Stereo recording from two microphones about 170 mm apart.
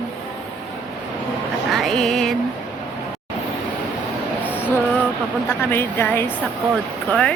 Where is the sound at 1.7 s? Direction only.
Centre (ahead or behind).